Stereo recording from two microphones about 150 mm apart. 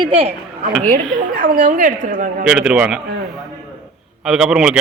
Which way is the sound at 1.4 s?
60° right (ahead or behind).